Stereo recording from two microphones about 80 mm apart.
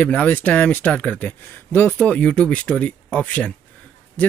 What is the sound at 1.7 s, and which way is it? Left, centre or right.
Speech, left.